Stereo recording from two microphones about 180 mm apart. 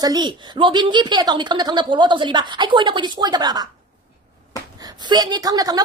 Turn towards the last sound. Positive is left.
turn(degrees=-20)  # may be behind; listen again after turning